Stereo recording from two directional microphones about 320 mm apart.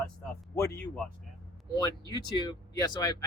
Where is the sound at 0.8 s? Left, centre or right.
Centre.